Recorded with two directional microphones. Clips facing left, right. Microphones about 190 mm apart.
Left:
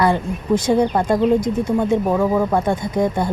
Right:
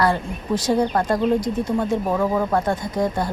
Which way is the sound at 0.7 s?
15° left (ahead or behind).